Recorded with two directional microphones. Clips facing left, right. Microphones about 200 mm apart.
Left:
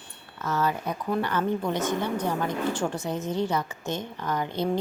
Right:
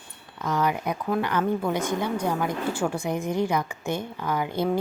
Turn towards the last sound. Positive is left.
turn(degrees=-10)  # may be behind; listen again after turning